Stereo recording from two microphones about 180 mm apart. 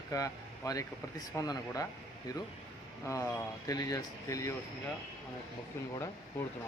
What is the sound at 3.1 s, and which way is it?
Speech, 15° left (ahead or behind).